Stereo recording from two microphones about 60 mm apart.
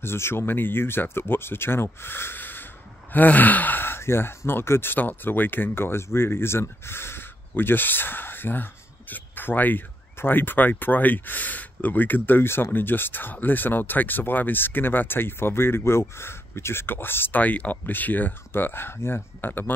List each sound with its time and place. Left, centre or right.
0.0 s speech: left
17.4 s speech: left